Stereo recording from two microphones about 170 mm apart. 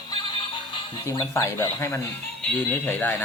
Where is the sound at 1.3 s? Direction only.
15° left (ahead or behind).